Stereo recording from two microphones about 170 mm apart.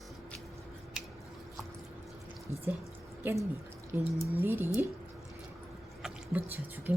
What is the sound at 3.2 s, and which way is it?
Speech, 10° right (ahead or behind).